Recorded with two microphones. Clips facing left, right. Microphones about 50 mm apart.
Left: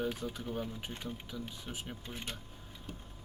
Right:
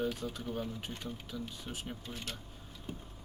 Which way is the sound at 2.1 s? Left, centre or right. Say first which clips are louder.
Left 2 dB; left.